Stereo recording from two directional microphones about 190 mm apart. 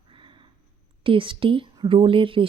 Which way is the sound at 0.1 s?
25° right (ahead or behind).